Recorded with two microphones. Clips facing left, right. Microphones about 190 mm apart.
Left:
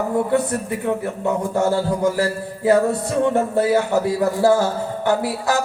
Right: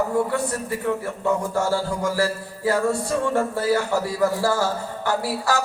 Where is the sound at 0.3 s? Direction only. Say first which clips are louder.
Left 5 dB; 20° left (ahead or behind).